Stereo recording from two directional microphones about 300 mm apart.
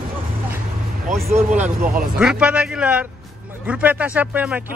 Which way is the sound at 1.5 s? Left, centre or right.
Right.